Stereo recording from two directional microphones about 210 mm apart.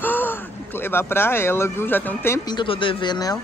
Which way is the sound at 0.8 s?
10° left (ahead or behind).